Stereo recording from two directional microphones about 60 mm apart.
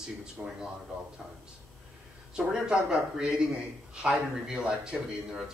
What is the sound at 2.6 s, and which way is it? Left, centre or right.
Speech, centre.